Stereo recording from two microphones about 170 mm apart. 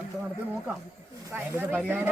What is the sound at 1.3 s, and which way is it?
Speech, 10° right (ahead or behind).